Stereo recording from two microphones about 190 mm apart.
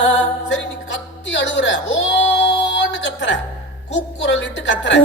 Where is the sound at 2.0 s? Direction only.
75° left (ahead or behind).